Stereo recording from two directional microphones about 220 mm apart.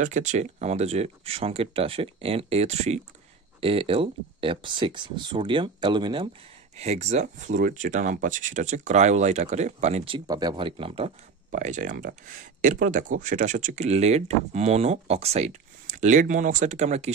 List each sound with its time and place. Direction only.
0.0 s speech: 35° right (ahead or behind)